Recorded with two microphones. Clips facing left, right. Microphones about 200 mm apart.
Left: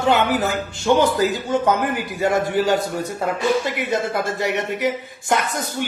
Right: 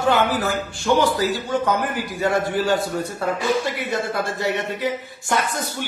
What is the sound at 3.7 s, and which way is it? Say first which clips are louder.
A man's voice: left 2 dB; 20° left (ahead or behind).